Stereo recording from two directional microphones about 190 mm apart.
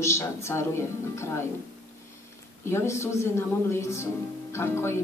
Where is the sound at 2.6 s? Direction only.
15° left (ahead or behind).